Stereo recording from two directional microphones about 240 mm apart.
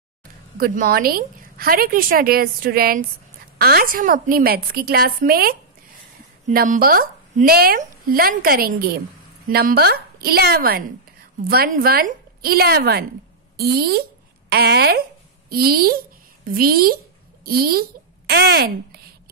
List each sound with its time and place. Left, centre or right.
0.6 s a woman's voice: right